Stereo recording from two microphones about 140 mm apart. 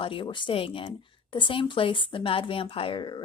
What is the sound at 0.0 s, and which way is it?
Speech, 40° left (ahead or behind).